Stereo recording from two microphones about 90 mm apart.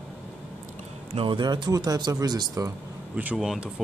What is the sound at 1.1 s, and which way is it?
Speech, 70° right (ahead or behind).